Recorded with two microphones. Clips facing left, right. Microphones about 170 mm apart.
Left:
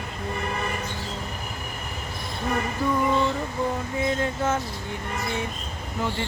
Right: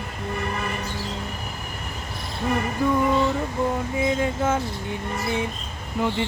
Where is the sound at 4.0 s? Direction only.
10° right (ahead or behind).